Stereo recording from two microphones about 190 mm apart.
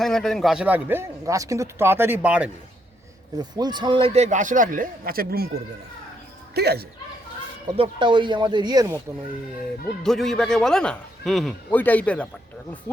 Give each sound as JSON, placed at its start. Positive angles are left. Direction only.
{"t": 0.0, "sound": "a man's voice", "side_deg": 0}
{"t": 3.3, "sound": "speech", "side_deg": -20}
{"t": 6.5, "sound": "speech", "side_deg": -60}
{"t": 7.8, "sound": "speech", "side_deg": -25}
{"t": 10.0, "sound": "a man's voice", "side_deg": 0}